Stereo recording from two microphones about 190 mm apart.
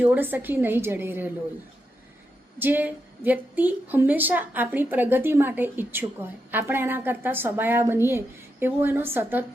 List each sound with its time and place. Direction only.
0.0 s a woman's voice: 10° right (ahead or behind)
2.6 s a woman's voice: 10° right (ahead or behind)